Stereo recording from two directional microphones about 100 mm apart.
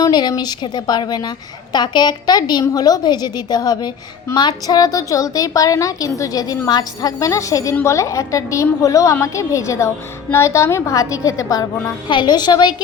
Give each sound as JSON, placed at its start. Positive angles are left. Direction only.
{"t": 0.0, "sound": "a woman's voice", "side_deg": 45}
{"t": 12.0, "sound": "a woman's voice", "side_deg": 50}